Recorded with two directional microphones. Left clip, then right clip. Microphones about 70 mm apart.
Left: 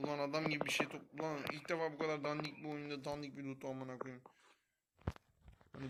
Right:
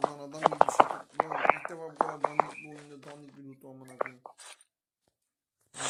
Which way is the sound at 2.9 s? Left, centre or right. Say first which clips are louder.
Left 4 dB; centre.